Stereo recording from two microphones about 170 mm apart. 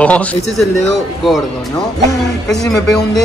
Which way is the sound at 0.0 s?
10° left (ahead or behind).